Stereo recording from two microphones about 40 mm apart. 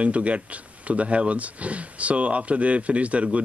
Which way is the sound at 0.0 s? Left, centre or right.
Right.